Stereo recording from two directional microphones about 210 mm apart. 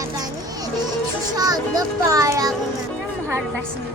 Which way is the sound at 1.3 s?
20° right (ahead or behind).